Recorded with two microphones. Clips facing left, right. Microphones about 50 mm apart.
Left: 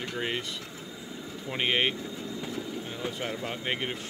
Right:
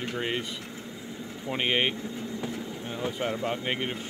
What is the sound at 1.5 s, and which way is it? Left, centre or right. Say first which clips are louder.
Speech: right 1 dB; centre.